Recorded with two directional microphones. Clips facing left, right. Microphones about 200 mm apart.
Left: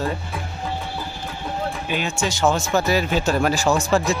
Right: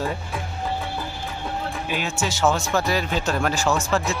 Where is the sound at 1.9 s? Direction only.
5° right (ahead or behind).